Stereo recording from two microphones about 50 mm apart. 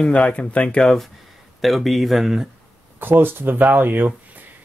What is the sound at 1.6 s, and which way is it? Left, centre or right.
Speech, centre.